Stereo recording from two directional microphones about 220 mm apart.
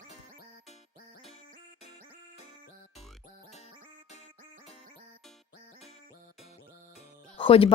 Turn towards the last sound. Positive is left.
turn(degrees=25)  # may be behind; listen again after turning